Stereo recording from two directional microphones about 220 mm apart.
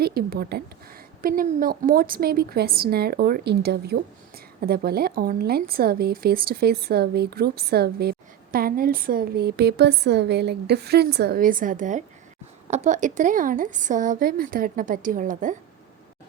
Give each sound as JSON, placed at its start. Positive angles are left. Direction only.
{"t": 0.0, "sound": "a woman's voice", "side_deg": -45}